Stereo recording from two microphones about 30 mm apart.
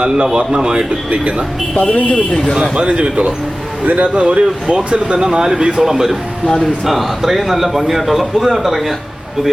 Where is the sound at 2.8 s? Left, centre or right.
Right.